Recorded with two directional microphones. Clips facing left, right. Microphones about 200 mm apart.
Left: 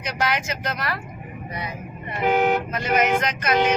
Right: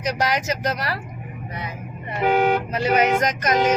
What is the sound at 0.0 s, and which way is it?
Speech, 40° right (ahead or behind).